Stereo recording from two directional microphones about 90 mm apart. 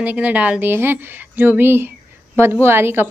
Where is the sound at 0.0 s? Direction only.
15° right (ahead or behind).